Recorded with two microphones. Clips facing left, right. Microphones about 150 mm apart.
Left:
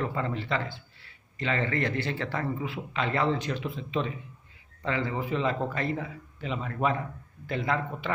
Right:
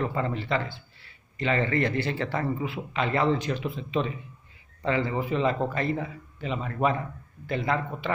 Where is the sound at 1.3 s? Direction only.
15° right (ahead or behind).